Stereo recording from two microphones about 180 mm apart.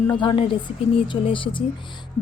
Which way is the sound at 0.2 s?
30° left (ahead or behind).